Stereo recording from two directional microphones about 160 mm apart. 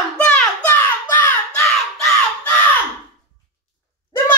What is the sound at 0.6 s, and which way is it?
Child singing, 10° left (ahead or behind).